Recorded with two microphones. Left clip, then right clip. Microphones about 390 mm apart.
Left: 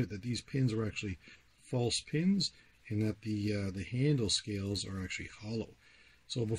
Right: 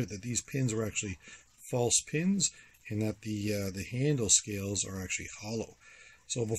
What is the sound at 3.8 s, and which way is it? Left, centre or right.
Speech, centre.